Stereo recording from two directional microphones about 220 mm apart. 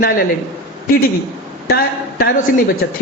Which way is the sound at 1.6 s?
45° left (ahead or behind).